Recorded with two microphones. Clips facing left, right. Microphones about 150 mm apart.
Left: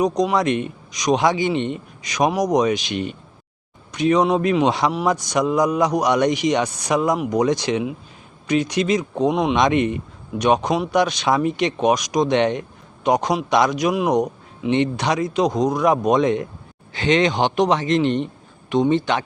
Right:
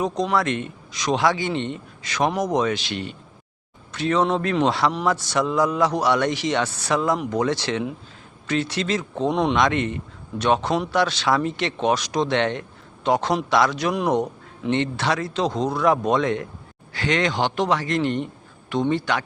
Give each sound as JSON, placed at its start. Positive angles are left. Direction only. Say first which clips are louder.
{"t": 0.0, "sound": "a man's voice", "louder": "left 4 dB", "side_deg": 15}
{"t": 9.6, "sound": "a man's voice", "louder": "left 3 dB", "side_deg": 15}